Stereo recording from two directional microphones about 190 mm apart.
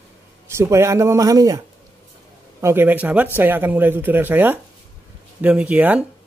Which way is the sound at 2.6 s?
10° right (ahead or behind).